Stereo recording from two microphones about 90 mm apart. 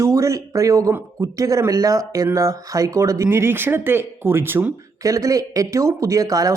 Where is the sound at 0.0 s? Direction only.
35° right (ahead or behind).